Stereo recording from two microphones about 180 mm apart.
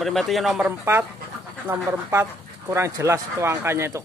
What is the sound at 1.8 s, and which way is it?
Speech, 15° right (ahead or behind).